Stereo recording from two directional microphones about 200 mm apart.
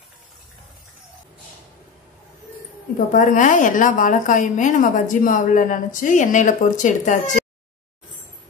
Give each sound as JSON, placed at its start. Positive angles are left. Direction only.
{"t": 3.1, "sound": "a woman's voice", "side_deg": 40}